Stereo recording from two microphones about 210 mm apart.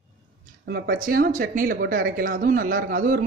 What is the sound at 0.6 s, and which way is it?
Speech, 45° right (ahead or behind).